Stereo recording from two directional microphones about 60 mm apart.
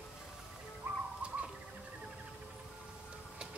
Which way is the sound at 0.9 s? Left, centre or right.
Right.